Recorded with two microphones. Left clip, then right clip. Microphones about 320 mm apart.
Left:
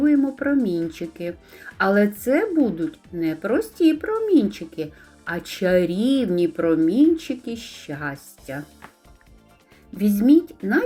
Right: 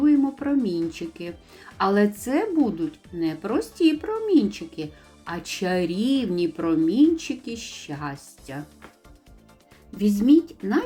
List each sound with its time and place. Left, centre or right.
0.0 s speech: centre
10.0 s a woman's voice: centre